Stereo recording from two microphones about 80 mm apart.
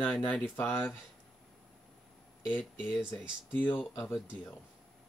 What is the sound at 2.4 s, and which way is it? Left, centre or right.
Speech, left.